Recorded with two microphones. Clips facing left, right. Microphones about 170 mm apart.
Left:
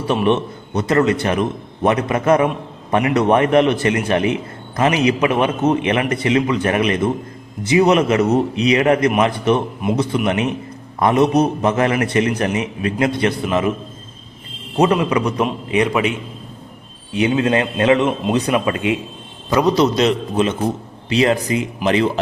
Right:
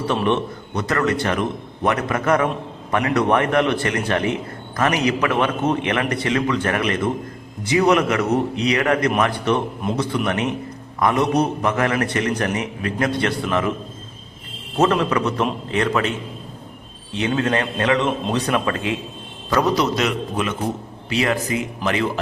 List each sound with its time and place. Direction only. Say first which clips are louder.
0.1 s a man's voice: left 4 dB; 20° left (ahead or behind)
14.8 s speech: left 2 dB; 15° left (ahead or behind)
17.2 s a man's voice: left 4 dB; 15° left (ahead or behind)